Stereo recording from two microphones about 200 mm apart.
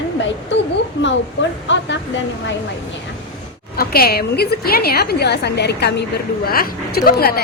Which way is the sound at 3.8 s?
50° left (ahead or behind).